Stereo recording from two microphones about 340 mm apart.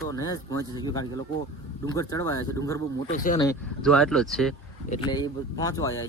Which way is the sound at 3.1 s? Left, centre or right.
Left.